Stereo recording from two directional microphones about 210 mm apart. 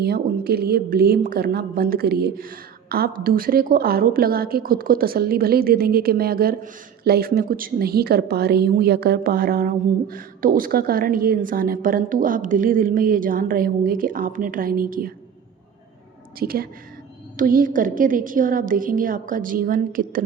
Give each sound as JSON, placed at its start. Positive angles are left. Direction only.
{"t": 0.0, "sound": "a woman's voice", "side_deg": -50}
{"t": 16.4, "sound": "a woman's voice", "side_deg": -45}